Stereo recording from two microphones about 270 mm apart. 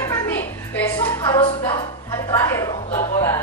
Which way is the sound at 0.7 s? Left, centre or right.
Centre.